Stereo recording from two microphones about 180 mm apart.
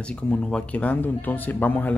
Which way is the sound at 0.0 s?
5° left (ahead or behind).